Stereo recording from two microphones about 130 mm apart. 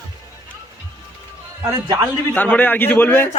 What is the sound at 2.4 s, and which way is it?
Speech, 15° left (ahead or behind).